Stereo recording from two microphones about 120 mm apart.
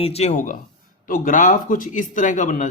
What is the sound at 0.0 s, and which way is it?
Speech, 60° left (ahead or behind).